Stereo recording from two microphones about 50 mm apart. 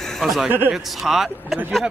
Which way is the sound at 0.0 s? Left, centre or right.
Centre.